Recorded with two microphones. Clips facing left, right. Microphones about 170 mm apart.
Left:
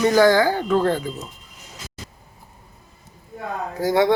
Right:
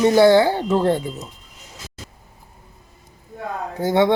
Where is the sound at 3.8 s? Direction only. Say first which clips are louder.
Right 1 dB; 25° right (ahead or behind).